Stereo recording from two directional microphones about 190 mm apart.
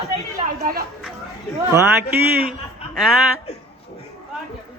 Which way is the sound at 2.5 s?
Centre (ahead or behind).